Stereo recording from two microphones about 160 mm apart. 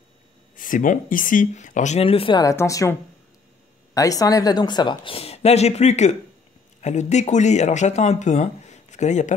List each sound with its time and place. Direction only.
0.6 s speech: 55° left (ahead or behind); by 2.4 s 35° left (ahead or behind)
2.4 s a woman's voice: 20° left (ahead or behind); by 9.3 s 45° left (ahead or behind)